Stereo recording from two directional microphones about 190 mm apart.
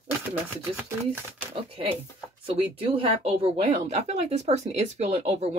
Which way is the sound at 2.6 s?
30° right (ahead or behind).